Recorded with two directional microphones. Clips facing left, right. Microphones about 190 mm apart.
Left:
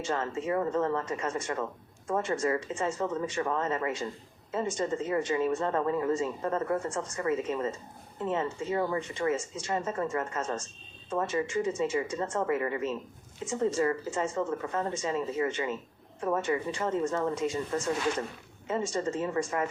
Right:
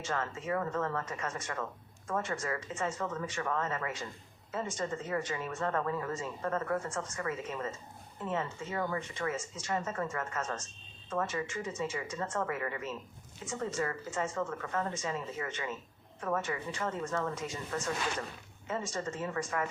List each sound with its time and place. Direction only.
0.0 s a woman's voice: 30° left (ahead or behind)